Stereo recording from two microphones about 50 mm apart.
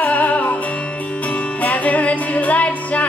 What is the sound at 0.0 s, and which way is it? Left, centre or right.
Music, left.